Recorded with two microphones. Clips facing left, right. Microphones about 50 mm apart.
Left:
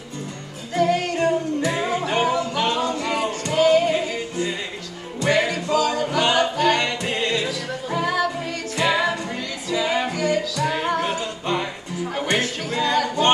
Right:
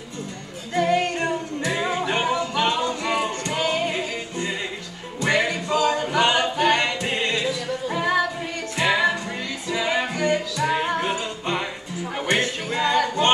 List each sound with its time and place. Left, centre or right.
0.7 s music: right
1.9 s music: right
2.9 s music: centre
5.3 s music: right
12.4 s music: right